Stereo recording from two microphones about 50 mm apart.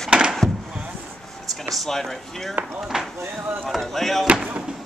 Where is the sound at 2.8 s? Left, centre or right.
Centre.